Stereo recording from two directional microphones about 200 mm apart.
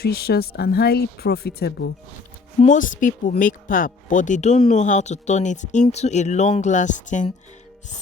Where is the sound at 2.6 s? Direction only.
40° left (ahead or behind).